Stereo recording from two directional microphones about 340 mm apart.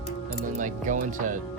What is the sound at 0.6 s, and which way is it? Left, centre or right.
Speech, right.